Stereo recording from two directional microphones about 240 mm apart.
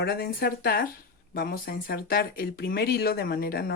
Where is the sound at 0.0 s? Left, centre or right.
Left.